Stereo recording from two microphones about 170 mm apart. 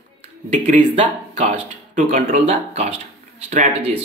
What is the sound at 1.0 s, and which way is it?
Speech, 45° right (ahead or behind).